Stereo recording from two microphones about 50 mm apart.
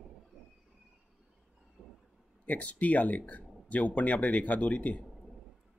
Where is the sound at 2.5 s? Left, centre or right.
Left.